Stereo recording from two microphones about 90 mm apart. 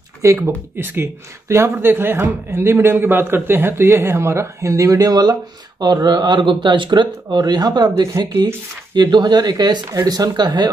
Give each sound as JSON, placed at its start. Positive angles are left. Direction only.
{"t": 0.2, "sound": "speech", "side_deg": -30}
{"t": 7.9, "sound": "speech", "side_deg": -30}
{"t": 8.9, "sound": "speech", "side_deg": -50}